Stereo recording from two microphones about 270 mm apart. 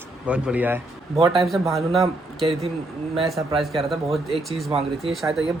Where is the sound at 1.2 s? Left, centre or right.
Right.